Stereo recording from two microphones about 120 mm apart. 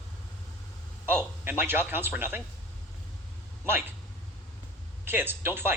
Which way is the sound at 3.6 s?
15° right (ahead or behind).